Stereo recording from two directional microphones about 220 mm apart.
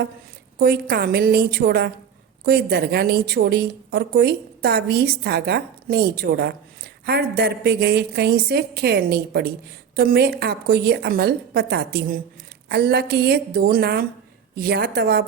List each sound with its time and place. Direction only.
0.6 s a woman's voice: 45° right (ahead or behind)